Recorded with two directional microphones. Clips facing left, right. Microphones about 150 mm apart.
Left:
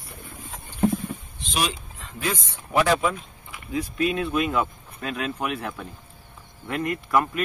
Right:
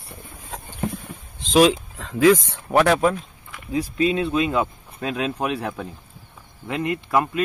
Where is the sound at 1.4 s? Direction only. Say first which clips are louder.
Right 13 dB; 90° right.